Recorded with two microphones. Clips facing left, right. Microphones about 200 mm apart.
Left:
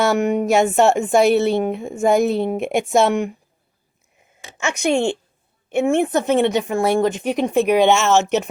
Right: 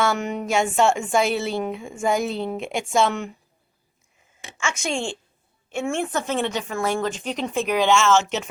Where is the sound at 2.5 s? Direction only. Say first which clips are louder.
Left 5 dB; 55° left (ahead or behind).